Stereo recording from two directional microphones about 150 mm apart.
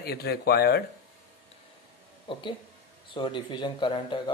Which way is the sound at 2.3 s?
35° left (ahead or behind).